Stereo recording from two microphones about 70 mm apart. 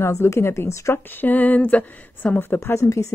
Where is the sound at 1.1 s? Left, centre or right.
Left.